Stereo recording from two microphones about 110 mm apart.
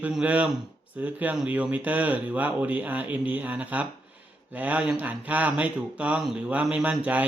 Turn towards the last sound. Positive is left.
turn(degrees=-15)  # may be behind; listen again after turning